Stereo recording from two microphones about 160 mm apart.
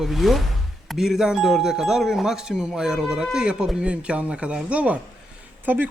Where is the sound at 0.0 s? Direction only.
Centre (ahead or behind).